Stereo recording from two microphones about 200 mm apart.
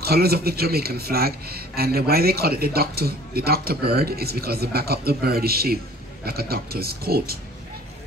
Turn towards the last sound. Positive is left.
turn(degrees=-50)  # may be behind; listen again after turning